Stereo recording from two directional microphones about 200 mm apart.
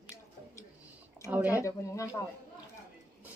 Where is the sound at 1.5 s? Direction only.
15° left (ahead or behind).